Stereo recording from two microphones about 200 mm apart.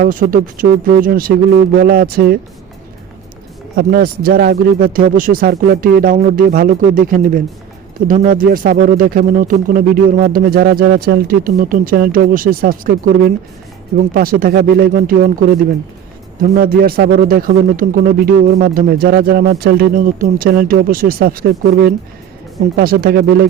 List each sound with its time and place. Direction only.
0.0 s a man's voice: 45° right (ahead or behind)
3.8 s a man's voice: 50° right (ahead or behind)